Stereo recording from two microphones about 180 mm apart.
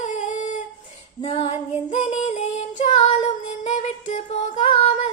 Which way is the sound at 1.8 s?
40° left (ahead or behind).